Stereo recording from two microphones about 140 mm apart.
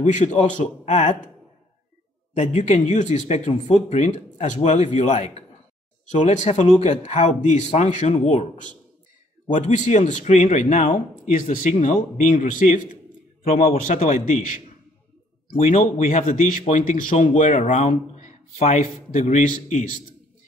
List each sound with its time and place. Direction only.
0.0 s speech: 60° left (ahead or behind)
2.4 s speech: 55° left (ahead or behind)
15.5 s speech: 55° left (ahead or behind)